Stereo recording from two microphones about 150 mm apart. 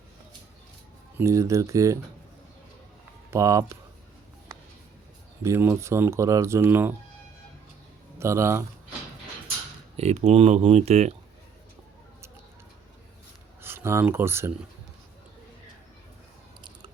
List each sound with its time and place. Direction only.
1.2 s speech: 20° right (ahead or behind)
3.2 s speech: 20° right (ahead or behind)
5.4 s speech: 15° right (ahead or behind)
8.2 s speech: 20° right (ahead or behind)
10.0 s speech: 45° right (ahead or behind)
13.6 s speech: 15° right (ahead or behind)